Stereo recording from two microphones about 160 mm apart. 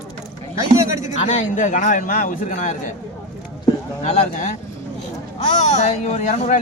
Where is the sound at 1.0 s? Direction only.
50° left (ahead or behind).